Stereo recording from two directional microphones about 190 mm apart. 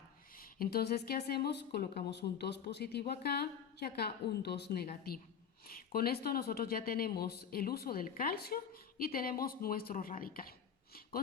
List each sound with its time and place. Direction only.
0.3 s speech: 50° left (ahead or behind)